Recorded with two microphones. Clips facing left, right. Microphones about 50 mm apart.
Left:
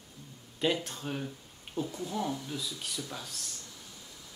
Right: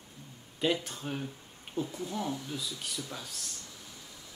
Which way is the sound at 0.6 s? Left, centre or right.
Centre.